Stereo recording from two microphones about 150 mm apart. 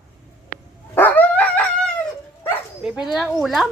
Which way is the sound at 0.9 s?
10° left (ahead or behind).